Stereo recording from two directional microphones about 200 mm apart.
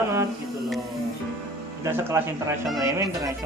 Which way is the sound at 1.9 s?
10° right (ahead or behind).